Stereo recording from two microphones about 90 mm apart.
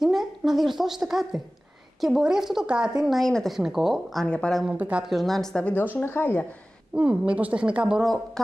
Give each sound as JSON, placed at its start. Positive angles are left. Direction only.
{"t": 0.0, "sound": "a woman's voice", "side_deg": -5}
{"t": 4.3, "sound": "speech", "side_deg": 10}
{"t": 4.7, "sound": "a woman's voice", "side_deg": -15}
{"t": 5.0, "sound": "a woman's voice", "side_deg": 0}
{"t": 6.0, "sound": "speech", "side_deg": 25}
{"t": 7.0, "sound": "a woman's voice", "side_deg": -15}